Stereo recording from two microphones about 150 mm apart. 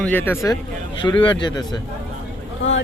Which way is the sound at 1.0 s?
30° left (ahead or behind).